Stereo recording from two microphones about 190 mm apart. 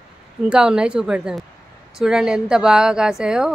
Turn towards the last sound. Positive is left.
turn(degrees=-5)  # may be behind; listen again after turning